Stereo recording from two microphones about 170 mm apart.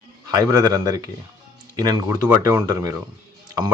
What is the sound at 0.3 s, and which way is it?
Speech, 20° right (ahead or behind).